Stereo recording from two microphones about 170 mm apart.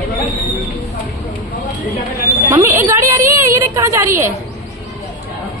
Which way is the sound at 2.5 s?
15° right (ahead or behind).